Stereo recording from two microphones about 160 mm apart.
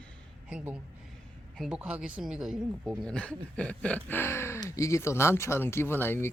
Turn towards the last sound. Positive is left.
turn(degrees=15)  # may be behind; listen again after turning